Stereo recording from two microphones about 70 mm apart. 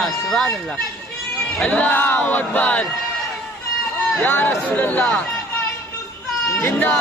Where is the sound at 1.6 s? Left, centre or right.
Left.